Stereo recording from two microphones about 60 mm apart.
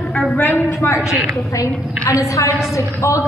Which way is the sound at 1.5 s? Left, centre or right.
Left.